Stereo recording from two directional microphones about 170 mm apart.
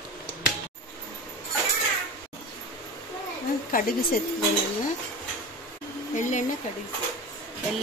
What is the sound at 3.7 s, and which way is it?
Speech, 60° left (ahead or behind).